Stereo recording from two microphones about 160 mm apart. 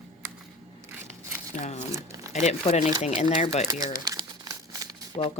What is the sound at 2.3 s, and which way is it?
Speech, 45° left (ahead or behind).